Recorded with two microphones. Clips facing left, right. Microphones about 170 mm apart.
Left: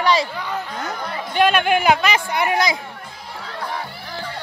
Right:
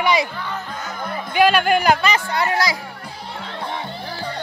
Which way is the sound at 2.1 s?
15° left (ahead or behind).